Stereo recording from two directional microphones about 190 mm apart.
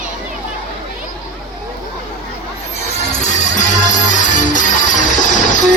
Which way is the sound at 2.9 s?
40° left (ahead or behind).